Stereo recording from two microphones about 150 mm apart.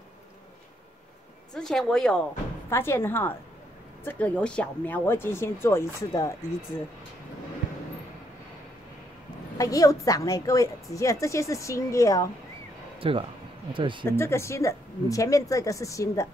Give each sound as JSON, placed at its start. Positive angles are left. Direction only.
{"t": 1.5, "sound": "speech", "side_deg": 5}
{"t": 2.7, "sound": "a woman's voice", "side_deg": 15}
{"t": 9.6, "sound": "a woman's voice", "side_deg": 20}
{"t": 13.0, "sound": "speech", "side_deg": -35}
{"t": 14.0, "sound": "a woman's voice", "side_deg": 15}